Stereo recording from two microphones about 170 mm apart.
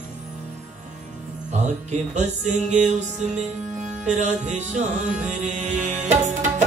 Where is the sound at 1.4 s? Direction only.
45° right (ahead or behind).